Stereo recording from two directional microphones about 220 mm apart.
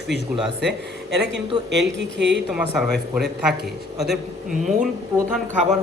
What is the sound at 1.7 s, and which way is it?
Speech, 55° right (ahead or behind).